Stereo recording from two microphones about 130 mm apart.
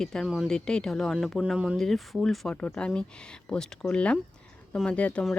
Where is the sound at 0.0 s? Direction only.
5° left (ahead or behind).